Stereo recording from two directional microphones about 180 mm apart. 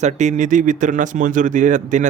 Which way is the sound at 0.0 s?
40° right (ahead or behind).